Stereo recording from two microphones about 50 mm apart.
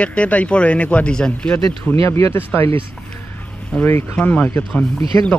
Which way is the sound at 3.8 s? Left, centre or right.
Left.